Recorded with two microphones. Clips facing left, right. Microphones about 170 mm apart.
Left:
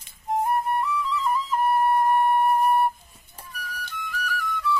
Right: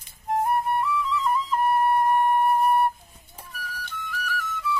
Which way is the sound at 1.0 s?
Centre (ahead or behind).